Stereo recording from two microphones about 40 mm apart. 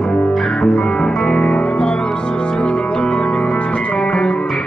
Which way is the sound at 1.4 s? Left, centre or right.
Left.